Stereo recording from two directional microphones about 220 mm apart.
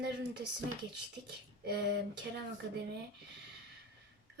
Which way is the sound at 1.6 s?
50° right (ahead or behind).